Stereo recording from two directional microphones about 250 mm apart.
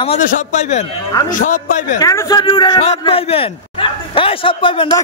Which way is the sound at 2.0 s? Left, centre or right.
Centre.